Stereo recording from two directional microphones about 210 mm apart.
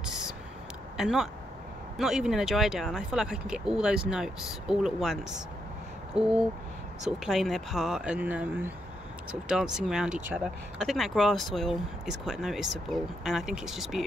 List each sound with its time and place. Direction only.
0.0 s a sound: centre (ahead or behind)
0.9 s speech: centre (ahead or behind)
6.2 s speech: 30° right (ahead or behind)
7.1 s speech: centre (ahead or behind)